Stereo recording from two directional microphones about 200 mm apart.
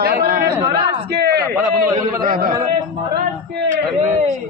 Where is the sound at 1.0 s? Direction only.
55° right (ahead or behind).